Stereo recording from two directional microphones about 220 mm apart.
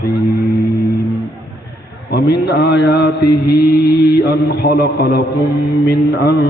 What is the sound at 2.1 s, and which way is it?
Mantra, 50° left (ahead or behind).